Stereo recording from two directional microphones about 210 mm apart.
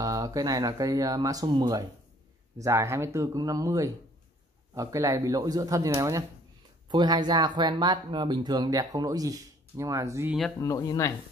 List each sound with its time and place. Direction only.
0.0 s speech: 15° right (ahead or behind)
10.6 s speech: 15° left (ahead or behind)